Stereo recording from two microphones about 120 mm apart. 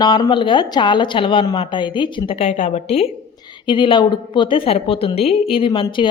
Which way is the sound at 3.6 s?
45° left (ahead or behind).